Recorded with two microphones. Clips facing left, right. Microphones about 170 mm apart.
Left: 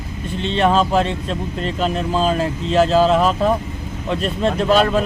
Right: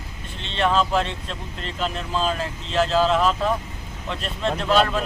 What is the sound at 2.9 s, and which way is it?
Speech, 45° left (ahead or behind).